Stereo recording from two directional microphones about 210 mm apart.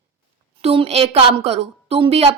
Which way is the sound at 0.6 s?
30° right (ahead or behind).